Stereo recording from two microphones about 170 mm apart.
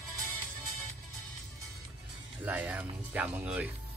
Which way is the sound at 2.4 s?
10° right (ahead or behind).